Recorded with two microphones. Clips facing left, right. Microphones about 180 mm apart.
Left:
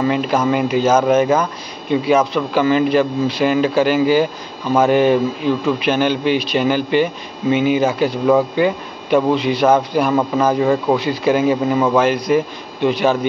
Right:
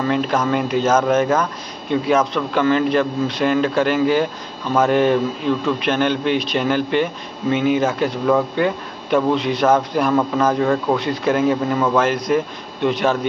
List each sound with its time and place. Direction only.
0.0 s speech: 5° left (ahead or behind)